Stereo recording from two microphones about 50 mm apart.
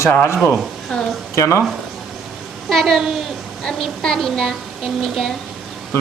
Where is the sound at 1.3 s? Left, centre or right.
Left.